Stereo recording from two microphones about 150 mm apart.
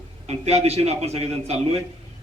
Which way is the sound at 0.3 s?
45° right (ahead or behind).